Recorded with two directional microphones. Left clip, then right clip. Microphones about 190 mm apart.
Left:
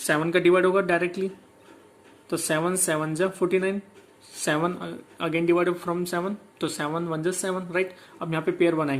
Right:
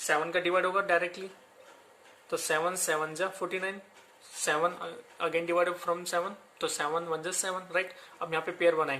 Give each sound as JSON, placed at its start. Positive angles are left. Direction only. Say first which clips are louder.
{"t": 0.1, "sound": "speech", "louder": "left 7 dB", "side_deg": 20}
{"t": 2.3, "sound": "speech", "louder": "left 4 dB", "side_deg": 15}